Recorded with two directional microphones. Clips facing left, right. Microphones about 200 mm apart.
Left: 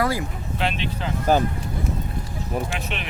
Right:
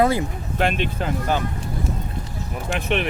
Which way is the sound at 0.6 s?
50° right (ahead or behind).